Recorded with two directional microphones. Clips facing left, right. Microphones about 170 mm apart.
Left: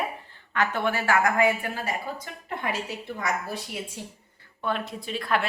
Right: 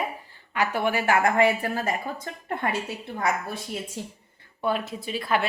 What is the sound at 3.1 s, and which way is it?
Speech, 55° right (ahead or behind).